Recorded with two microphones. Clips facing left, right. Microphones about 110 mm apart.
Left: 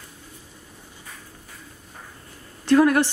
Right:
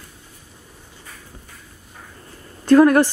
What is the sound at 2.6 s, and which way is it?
Speech, 45° right (ahead or behind).